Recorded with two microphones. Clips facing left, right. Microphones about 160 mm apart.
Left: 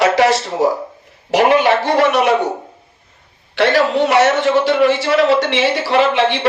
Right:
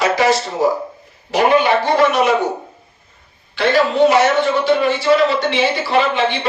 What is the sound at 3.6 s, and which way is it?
Speech, 75° left (ahead or behind).